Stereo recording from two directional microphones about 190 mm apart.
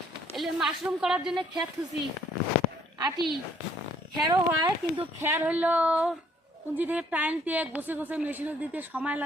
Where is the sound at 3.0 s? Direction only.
25° right (ahead or behind).